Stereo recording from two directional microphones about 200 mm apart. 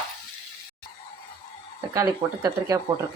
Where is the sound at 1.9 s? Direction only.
15° right (ahead or behind).